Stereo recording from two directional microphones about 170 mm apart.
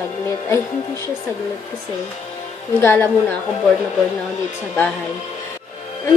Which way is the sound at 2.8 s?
10° left (ahead or behind).